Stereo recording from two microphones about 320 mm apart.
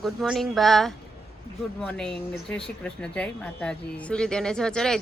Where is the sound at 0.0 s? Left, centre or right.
Centre.